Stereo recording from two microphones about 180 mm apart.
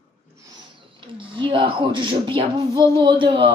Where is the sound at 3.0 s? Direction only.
25° right (ahead or behind).